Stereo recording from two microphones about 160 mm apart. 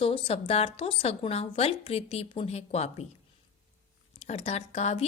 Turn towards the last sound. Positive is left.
turn(degrees=45)  # may be behind; listen again after turning